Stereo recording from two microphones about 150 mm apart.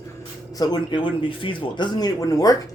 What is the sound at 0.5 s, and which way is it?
Speech, 30° left (ahead or behind).